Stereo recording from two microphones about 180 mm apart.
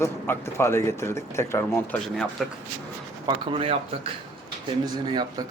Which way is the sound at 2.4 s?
Centre (ahead or behind).